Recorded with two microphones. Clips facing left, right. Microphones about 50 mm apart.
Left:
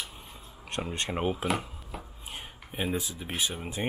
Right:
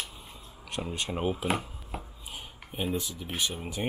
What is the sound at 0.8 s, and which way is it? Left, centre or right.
Speech, left.